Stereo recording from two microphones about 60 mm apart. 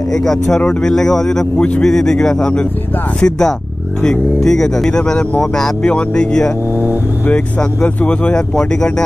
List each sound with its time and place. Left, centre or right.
0.1 s speech: centre
5.9 s speech: centre